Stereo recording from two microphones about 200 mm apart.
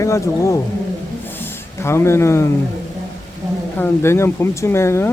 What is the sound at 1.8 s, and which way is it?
Speech, 15° left (ahead or behind).